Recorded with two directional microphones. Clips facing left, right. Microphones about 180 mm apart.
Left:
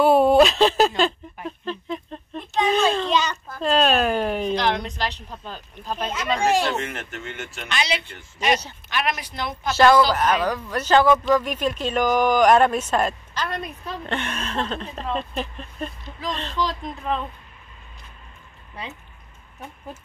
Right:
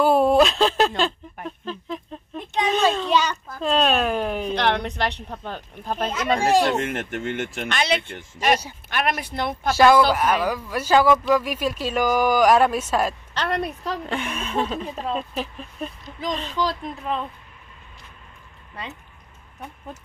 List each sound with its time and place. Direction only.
0.0 s speech: centre (ahead or behind)
4.6 s a woman's voice: 60° right (ahead or behind)
9.7 s speech: 10° right (ahead or behind)
13.3 s a woman's voice: 70° right (ahead or behind)
14.0 s speech: 5° right (ahead or behind)